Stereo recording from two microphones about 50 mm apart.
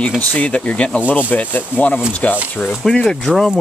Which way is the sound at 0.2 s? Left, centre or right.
Left.